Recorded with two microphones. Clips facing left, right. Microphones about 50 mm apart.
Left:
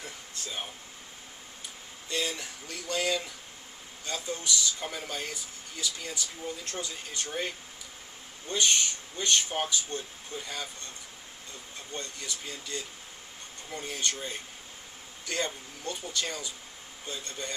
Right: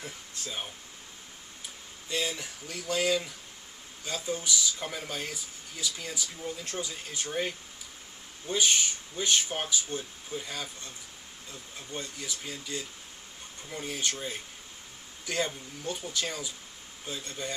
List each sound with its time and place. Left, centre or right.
0.0 s speech: centre
2.0 s speech: centre
11.9 s speech: centre